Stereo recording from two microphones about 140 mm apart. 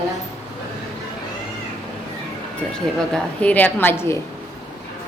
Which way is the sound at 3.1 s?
10° left (ahead or behind).